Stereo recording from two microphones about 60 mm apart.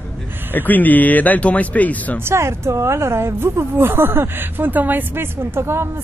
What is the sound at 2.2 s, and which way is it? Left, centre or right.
A woman's voice, right.